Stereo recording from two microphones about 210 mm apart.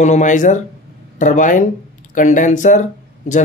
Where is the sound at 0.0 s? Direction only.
35° left (ahead or behind).